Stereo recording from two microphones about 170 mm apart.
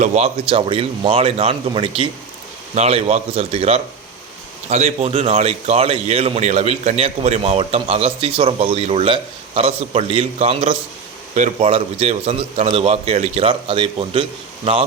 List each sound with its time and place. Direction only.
0.0 s a man's voice: 40° right (ahead or behind)